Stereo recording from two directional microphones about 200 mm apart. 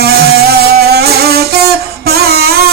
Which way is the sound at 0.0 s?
50° right (ahead or behind).